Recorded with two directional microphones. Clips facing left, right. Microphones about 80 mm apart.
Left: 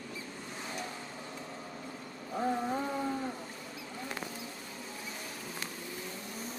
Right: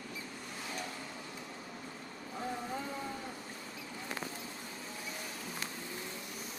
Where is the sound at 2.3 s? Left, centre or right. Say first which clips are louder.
Left 7 dB; left.